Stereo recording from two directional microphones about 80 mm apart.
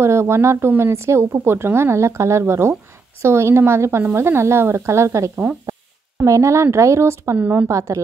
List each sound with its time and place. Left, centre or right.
0.0 s speech: right
7.3 s speech: right
7.6 s speech: right